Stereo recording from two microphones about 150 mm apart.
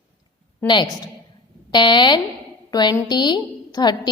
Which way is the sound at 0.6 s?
30° left (ahead or behind).